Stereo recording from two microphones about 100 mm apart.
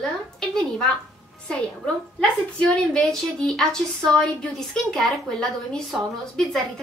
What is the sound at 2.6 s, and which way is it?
A woman's voice, 10° left (ahead or behind).